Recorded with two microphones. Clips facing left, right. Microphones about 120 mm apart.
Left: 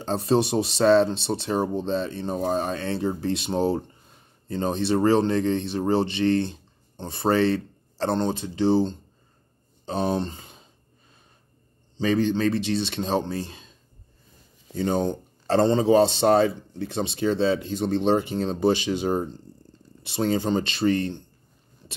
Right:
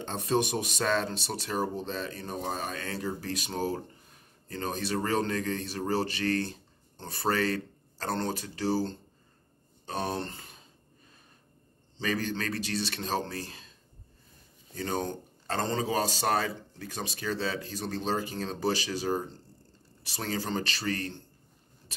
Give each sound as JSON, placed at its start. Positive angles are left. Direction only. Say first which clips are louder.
{"t": 0.0, "sound": "speech", "louder": "left 6 dB", "side_deg": 30}
{"t": 12.0, "sound": "speech", "louder": "left 10 dB", "side_deg": 20}
{"t": 14.8, "sound": "speech", "louder": "left 8 dB", "side_deg": 20}